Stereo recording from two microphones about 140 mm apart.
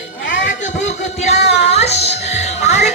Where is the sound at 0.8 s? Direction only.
55° left (ahead or behind).